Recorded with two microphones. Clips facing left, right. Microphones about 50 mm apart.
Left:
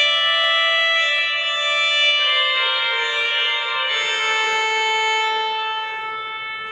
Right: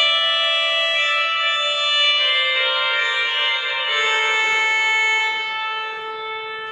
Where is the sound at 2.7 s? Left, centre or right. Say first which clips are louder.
Right 1 dB; centre.